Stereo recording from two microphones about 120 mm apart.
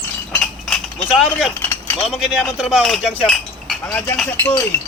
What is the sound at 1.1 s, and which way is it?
Speech, centre (ahead or behind).